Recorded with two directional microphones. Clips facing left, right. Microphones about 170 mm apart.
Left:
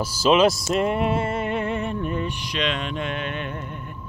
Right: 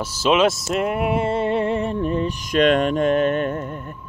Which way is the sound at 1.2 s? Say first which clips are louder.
Right 5 dB; 30° right (ahead or behind).